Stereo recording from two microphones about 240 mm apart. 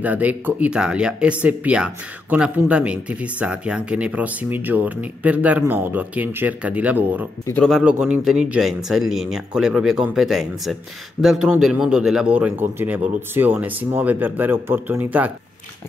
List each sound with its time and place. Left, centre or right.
0.0 s speech: centre
7.4 s speech: centre